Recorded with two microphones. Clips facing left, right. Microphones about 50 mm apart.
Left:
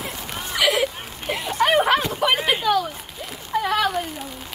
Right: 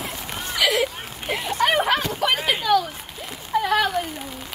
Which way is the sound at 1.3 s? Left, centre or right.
Centre.